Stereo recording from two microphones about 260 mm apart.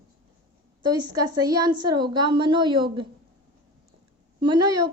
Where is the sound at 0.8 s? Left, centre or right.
Centre.